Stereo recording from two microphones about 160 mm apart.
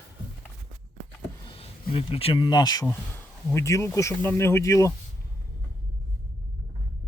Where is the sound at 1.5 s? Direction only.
35° left (ahead or behind); by 4.9 s 20° left (ahead or behind).